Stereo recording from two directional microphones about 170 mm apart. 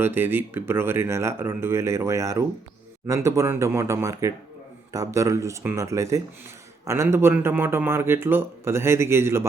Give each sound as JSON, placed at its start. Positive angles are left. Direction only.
{"t": 0.0, "sound": "speech", "side_deg": -15}